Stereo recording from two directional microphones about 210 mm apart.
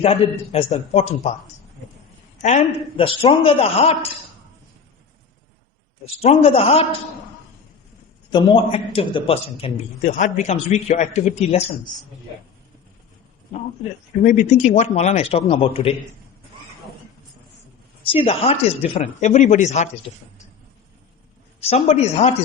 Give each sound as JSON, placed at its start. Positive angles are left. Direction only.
{"t": 0.0, "sound": "a man's voice", "side_deg": 30}
{"t": 2.4, "sound": "a woman's voice", "side_deg": 35}
{"t": 6.2, "sound": "a woman's voice", "side_deg": 30}
{"t": 8.3, "sound": "a man's voice", "side_deg": 20}
{"t": 14.2, "sound": "a man's voice", "side_deg": 35}
{"t": 18.1, "sound": "a man's voice", "side_deg": 25}
{"t": 21.6, "sound": "a man's voice", "side_deg": 30}